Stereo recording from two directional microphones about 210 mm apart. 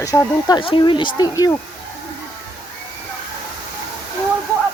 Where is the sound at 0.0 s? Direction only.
15° left (ahead or behind).